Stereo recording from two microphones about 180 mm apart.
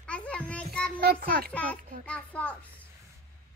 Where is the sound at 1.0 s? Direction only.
60° right (ahead or behind).